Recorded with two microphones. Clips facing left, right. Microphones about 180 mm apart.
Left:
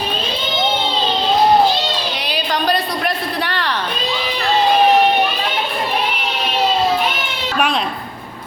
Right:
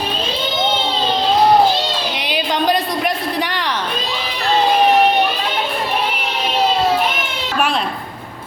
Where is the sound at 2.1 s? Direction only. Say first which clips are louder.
Right 1 dB; 20° right (ahead or behind).